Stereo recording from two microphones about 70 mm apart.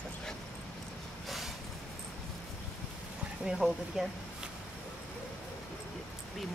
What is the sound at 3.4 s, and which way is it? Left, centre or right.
Speech, centre.